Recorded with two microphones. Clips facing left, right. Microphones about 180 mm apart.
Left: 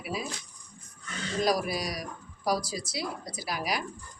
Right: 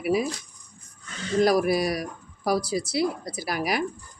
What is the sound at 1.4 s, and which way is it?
Speech, 60° right (ahead or behind).